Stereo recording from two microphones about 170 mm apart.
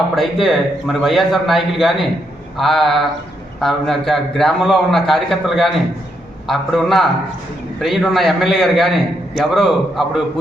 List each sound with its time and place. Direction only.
0.2 s a man's voice: centre (ahead or behind)